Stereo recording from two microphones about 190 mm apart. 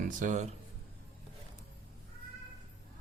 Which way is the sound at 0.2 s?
40° right (ahead or behind).